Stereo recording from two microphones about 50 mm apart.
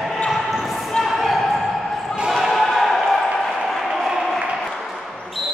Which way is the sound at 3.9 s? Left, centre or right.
Centre.